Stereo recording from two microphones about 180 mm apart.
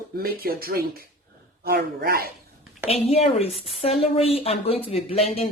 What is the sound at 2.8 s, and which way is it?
Speech, 35° left (ahead or behind).